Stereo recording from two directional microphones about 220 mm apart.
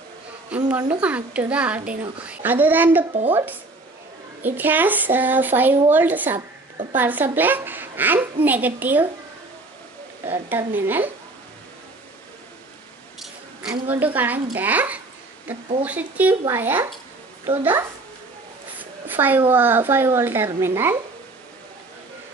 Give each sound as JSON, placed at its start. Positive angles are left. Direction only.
{"t": 0.7, "sound": "a woman's voice", "side_deg": -5}
{"t": 3.1, "sound": "speech", "side_deg": -25}
{"t": 4.4, "sound": "a woman's voice", "side_deg": -10}
{"t": 10.2, "sound": "a woman's voice", "side_deg": -10}
{"t": 13.2, "sound": "a woman's voice", "side_deg": -5}
{"t": 18.8, "sound": "a sound", "side_deg": -10}
{"t": 19.5, "sound": "a woman's voice", "side_deg": -10}